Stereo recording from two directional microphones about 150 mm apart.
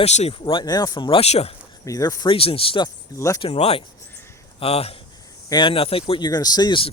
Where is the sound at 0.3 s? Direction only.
35° left (ahead or behind).